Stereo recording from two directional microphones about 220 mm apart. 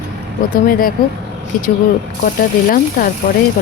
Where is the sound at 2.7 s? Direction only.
40° left (ahead or behind).